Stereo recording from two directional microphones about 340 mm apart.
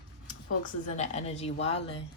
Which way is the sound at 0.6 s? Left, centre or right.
Centre.